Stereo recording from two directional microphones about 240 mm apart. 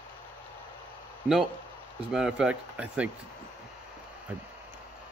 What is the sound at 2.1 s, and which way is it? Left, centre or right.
Speech, centre.